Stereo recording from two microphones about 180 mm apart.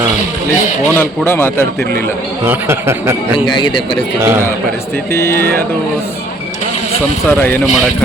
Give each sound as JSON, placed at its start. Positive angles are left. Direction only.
{"t": 0.9, "sound": "a man's voice", "side_deg": 10}
{"t": 2.5, "sound": "a man's voice", "side_deg": -15}
{"t": 3.3, "sound": "a man's voice", "side_deg": 25}
{"t": 4.2, "sound": "a man's voice", "side_deg": -15}
{"t": 5.1, "sound": "a man's voice", "side_deg": 15}
{"t": 7.3, "sound": "a man's voice", "side_deg": 10}